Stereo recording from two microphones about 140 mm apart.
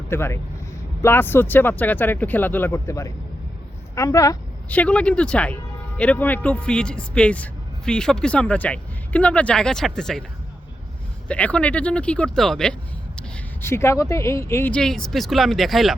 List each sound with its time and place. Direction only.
0.1 s speech: 20° left (ahead or behind)
4.7 s speech: 10° left (ahead or behind)
11.3 s speech: 10° left (ahead or behind)
14.7 s speech: 5° left (ahead or behind)